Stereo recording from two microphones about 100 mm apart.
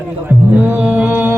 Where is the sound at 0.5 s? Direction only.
15° right (ahead or behind).